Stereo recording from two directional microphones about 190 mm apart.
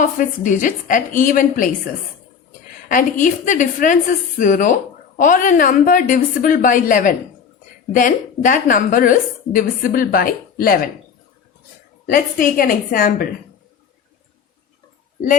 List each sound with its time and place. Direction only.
0.0 s a woman's voice: 40° left (ahead or behind)
2.9 s a woman's voice: 45° left (ahead or behind)
12.0 s a woman's voice: 45° left (ahead or behind)